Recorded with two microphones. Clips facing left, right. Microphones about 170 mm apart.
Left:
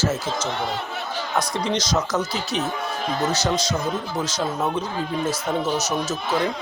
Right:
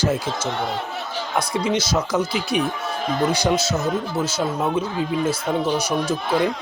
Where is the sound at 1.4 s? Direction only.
10° right (ahead or behind).